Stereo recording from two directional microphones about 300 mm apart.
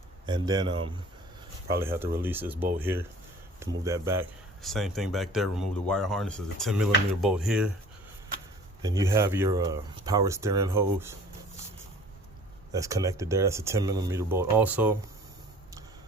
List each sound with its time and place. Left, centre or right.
0.3 s speech: centre
8.8 s speech: centre
12.7 s speech: centre